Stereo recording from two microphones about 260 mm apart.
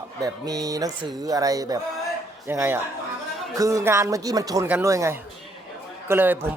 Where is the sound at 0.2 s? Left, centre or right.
Centre.